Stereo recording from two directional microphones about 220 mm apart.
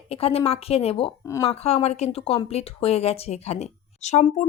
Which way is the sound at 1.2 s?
15° left (ahead or behind).